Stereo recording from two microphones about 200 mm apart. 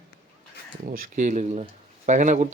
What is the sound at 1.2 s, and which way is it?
Speech, 35° right (ahead or behind).